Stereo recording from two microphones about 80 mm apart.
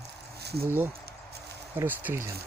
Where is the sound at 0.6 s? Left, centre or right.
Right.